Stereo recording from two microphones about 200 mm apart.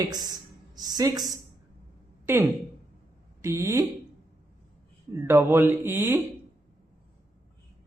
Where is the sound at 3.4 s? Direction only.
15° right (ahead or behind).